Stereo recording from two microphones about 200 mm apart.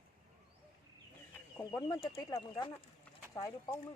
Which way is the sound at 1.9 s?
15° left (ahead or behind).